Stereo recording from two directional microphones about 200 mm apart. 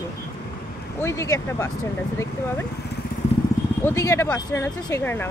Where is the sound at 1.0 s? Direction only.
15° left (ahead or behind).